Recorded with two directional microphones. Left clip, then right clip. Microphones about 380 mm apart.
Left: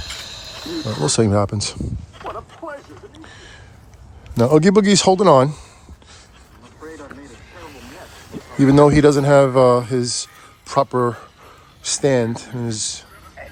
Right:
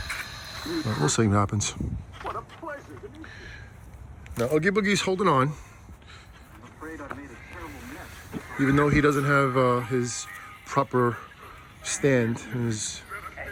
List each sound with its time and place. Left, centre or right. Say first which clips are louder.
0.0 s cricket: left 3 dB; centre
1.0 s speech: left 7 dB; centre
2.1 s a sound: left 3 dB; left
3.2 s a sound: left 2 dB; centre
4.6 s speech: left 10 dB; centre
8.5 s speech: left 10 dB; centre